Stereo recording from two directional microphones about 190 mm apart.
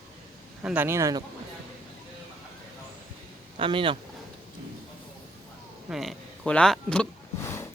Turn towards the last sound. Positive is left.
turn(degrees=15)  # may be behind; listen again after turning